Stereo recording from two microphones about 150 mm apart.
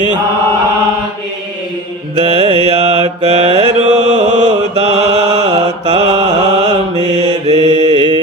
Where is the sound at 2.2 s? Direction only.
40° right (ahead or behind).